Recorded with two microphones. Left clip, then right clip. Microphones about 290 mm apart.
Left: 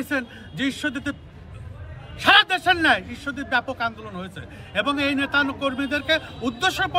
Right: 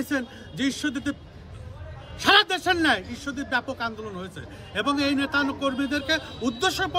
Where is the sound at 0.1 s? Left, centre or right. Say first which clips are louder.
Left 2 dB; centre.